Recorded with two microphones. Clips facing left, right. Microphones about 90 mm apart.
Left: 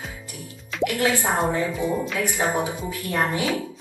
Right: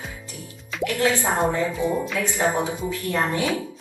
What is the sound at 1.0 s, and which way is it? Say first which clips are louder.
A woman's voice: right 2 dB; 15° left (ahead or behind).